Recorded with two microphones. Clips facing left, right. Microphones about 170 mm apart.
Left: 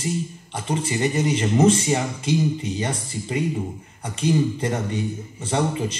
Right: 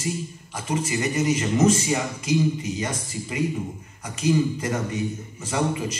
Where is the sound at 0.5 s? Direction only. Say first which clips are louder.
Even; 30° left (ahead or behind).